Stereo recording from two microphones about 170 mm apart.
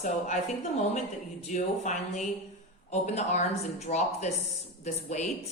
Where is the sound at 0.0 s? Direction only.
45° left (ahead or behind).